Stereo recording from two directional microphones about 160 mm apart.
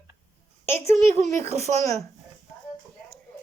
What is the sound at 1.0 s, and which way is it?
Speech, 45° right (ahead or behind).